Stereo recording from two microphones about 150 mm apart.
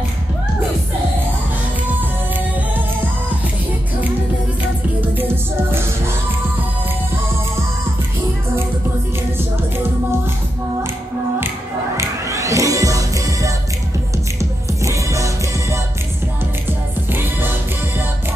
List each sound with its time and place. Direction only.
5.1 s music: 15° right (ahead or behind)
12.0 s music: 20° right (ahead or behind)
17.1 s music: 15° right (ahead or behind)